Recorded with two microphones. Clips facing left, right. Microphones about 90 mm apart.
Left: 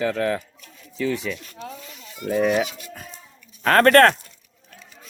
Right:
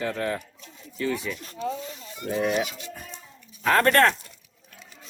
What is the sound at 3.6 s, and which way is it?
Speech, 60° left (ahead or behind).